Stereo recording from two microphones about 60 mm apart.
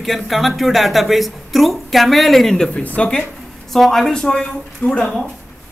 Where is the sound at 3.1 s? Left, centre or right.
Centre.